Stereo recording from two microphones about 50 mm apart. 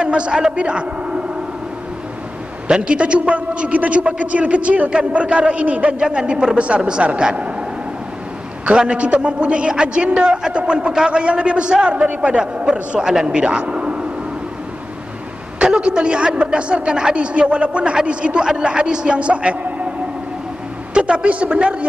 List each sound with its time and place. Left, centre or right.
0.0 s a man's voice: right
2.7 s a man's voice: right
8.6 s a man's voice: right
15.6 s a man's voice: centre
20.9 s a man's voice: right